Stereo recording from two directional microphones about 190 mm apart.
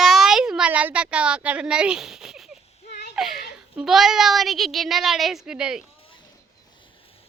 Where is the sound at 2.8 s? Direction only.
60° left (ahead or behind).